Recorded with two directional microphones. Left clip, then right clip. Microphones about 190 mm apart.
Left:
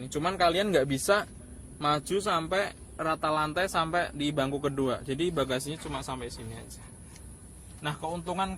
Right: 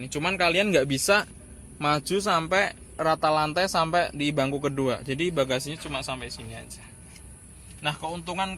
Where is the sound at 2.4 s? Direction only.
35° right (ahead or behind).